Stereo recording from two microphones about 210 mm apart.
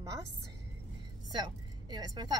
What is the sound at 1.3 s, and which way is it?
A woman's voice, 20° right (ahead or behind).